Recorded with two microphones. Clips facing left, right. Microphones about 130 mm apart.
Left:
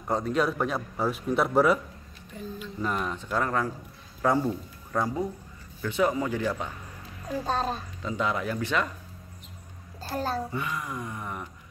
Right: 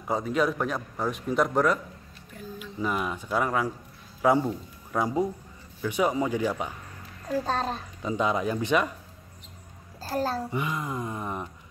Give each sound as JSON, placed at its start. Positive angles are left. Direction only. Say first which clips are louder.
{"t": 0.0, "sound": "a man's voice", "louder": "even", "side_deg": 0}
{"t": 2.3, "sound": "speech", "louder": "left 1 dB", "side_deg": -5}
{"t": 7.3, "sound": "a man's voice", "louder": "right 1 dB", "side_deg": 5}
{"t": 8.0, "sound": "a sound", "louder": "right 4 dB", "side_deg": -20}
{"t": 10.1, "sound": "a man's voice", "louder": "right 2 dB", "side_deg": 0}
{"t": 10.5, "sound": "a sound", "louder": "right 2 dB", "side_deg": -20}